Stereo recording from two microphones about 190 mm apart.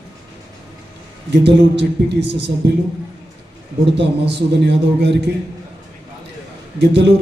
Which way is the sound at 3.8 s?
65° right (ahead or behind).